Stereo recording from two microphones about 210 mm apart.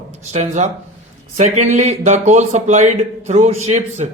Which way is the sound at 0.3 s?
35° right (ahead or behind).